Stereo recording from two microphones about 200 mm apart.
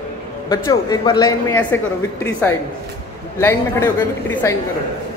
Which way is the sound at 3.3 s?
15° left (ahead or behind).